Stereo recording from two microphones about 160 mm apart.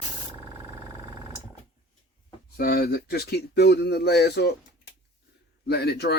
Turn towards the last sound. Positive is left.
turn(degrees=90)